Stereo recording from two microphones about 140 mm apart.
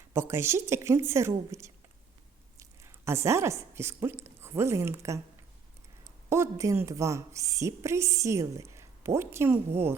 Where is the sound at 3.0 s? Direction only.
20° right (ahead or behind).